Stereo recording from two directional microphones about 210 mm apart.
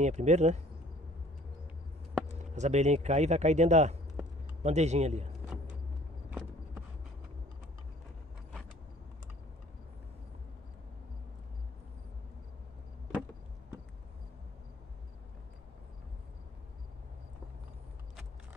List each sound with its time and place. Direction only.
0.0 s speech: 35° right (ahead or behind)
2.5 s speech: 35° right (ahead or behind)